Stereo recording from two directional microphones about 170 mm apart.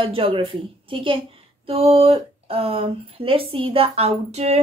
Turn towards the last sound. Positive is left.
turn(degrees=-40)  # may be behind; listen again after turning